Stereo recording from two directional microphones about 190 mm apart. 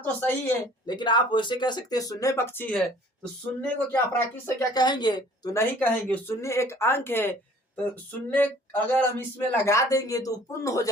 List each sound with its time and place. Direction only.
0.0 s speech: 10° left (ahead or behind)
0.9 s speech: 25° left (ahead or behind); by 4.0 s 5° left (ahead or behind)
4.4 s speech: 20° left (ahead or behind)